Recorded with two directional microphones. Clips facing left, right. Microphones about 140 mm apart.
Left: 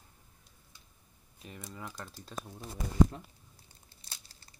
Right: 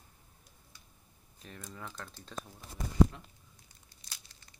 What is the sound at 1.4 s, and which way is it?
Speech, 5° left (ahead or behind).